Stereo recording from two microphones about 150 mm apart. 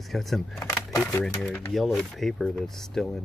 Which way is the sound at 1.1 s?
10° left (ahead or behind).